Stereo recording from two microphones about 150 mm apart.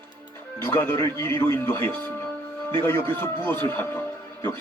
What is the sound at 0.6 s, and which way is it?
Speech, 15° left (ahead or behind).